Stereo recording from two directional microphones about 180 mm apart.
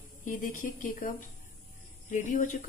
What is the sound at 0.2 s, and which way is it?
Speech, 45° left (ahead or behind).